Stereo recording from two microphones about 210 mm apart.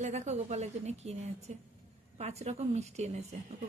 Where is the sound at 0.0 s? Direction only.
35° right (ahead or behind).